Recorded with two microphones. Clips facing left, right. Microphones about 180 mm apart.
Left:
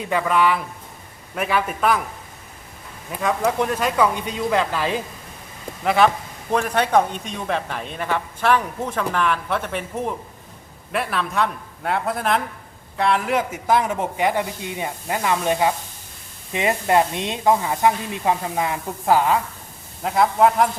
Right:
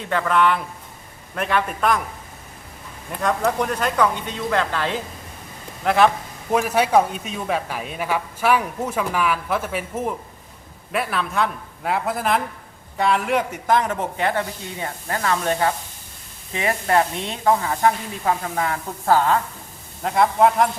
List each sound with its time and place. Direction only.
0.0 s a man's voice: 10° left (ahead or behind)
3.1 s a man's voice: 5° left (ahead or behind)